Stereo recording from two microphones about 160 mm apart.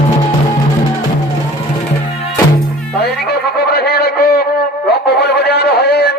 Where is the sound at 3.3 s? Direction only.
85° left.